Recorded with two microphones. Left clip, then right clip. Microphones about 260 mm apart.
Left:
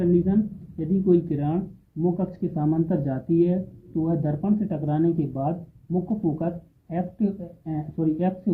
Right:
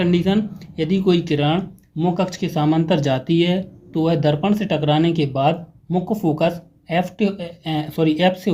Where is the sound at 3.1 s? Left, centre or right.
Right.